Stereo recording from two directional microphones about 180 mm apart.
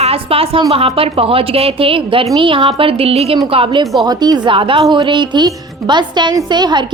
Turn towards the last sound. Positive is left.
turn(degrees=-25)  # may be behind; listen again after turning